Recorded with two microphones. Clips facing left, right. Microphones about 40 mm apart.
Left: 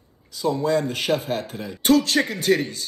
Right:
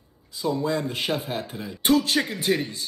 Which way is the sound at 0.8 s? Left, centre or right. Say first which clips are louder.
Left 4 dB; right.